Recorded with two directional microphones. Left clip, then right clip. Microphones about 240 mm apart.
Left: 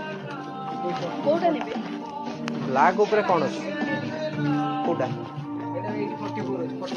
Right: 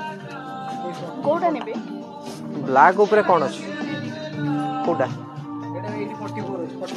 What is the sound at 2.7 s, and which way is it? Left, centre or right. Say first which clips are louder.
Speech: right 6 dB; right.